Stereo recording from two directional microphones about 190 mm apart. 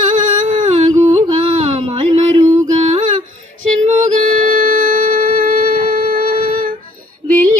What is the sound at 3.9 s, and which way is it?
Music, 40° right (ahead or behind).